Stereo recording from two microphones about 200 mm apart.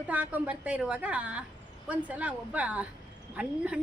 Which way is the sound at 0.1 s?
5° right (ahead or behind).